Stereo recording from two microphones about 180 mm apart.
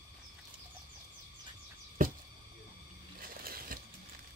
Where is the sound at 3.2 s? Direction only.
55° right (ahead or behind).